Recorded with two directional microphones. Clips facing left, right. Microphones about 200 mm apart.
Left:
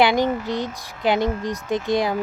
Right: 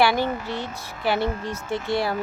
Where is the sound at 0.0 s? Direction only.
15° left (ahead or behind).